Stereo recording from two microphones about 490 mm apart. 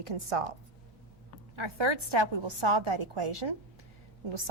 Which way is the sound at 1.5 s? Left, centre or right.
Right.